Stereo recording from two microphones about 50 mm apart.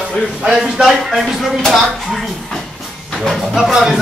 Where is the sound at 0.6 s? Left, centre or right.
Centre.